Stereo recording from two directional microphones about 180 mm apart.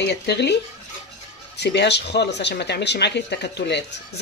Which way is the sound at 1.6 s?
70° left (ahead or behind).